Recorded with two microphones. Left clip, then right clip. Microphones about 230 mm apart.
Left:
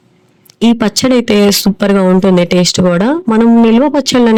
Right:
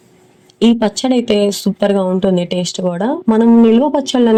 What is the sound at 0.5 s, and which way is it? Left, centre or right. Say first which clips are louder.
Speech: left 2 dB; left.